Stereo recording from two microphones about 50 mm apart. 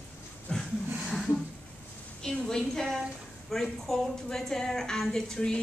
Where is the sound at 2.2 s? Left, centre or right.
Centre.